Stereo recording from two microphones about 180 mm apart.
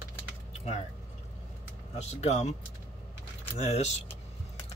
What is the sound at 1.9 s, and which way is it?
Speech, 40° left (ahead or behind).